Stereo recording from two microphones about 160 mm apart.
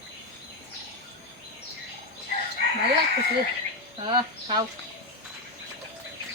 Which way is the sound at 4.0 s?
30° right (ahead or behind).